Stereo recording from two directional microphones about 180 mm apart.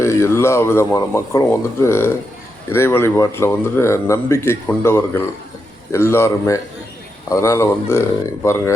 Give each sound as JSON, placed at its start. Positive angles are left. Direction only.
{"t": 0.0, "sound": "speech", "side_deg": 15}